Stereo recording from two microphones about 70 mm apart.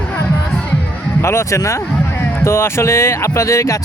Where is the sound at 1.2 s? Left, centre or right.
Left.